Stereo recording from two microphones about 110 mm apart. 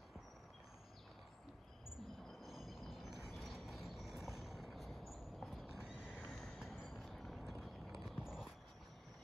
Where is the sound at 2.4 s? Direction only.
5° right (ahead or behind).